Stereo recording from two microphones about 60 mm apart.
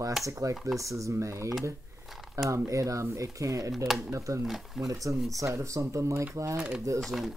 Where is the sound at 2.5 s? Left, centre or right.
Right.